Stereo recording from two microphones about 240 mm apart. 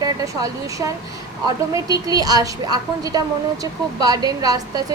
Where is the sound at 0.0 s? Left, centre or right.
Centre.